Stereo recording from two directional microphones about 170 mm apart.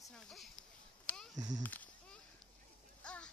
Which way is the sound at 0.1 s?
Centre (ahead or behind).